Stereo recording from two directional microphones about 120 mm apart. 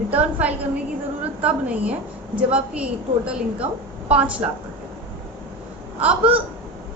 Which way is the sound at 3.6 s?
70° right (ahead or behind).